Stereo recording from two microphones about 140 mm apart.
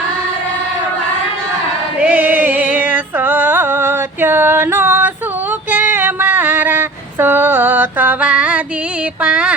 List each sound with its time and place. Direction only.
2.0 s choir: 10° right (ahead or behind)
2.8 s music: 10° right (ahead or behind)
5.7 s a sound: 15° right (ahead or behind)
9.2 s speech: 5° right (ahead or behind)